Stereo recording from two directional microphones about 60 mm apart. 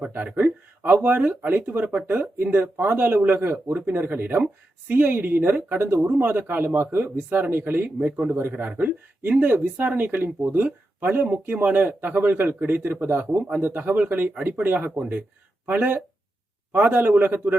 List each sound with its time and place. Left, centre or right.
0.3 s speech: right
8.3 s speech: right
8.8 s speech: right